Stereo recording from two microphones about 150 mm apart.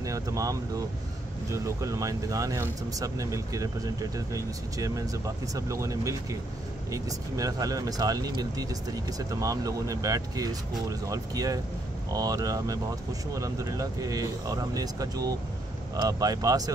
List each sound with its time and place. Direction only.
0.0 s speech: 20° right (ahead or behind)